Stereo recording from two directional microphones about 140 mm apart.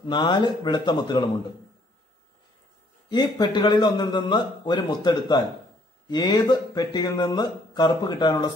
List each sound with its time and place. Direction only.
0.0 s a man's voice: 30° left (ahead or behind)
3.1 s a man's voice: 30° left (ahead or behind)